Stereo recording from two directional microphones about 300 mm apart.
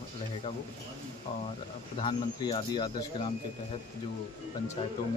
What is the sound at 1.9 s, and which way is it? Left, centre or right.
Speech, centre.